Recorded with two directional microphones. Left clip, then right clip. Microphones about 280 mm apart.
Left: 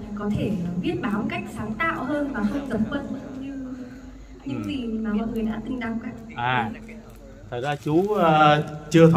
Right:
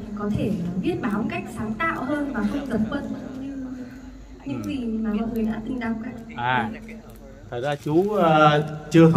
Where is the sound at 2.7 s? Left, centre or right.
Right.